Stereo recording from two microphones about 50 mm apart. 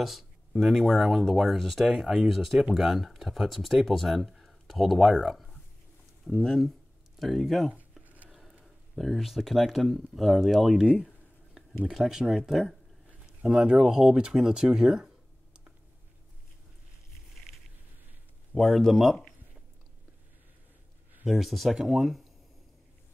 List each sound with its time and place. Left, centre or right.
0.0 s speech: centre
8.0 s a sound: right
8.3 s speech: centre
11.9 s speech: centre
12.3 s speech: centre
13.4 s speech: centre
14.3 s a sound: centre
18.5 s speech: centre
21.3 s speech: centre